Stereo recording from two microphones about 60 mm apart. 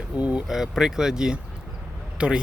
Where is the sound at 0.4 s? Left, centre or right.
Centre.